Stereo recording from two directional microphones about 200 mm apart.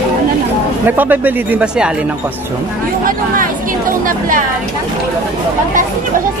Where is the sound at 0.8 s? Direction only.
10° right (ahead or behind).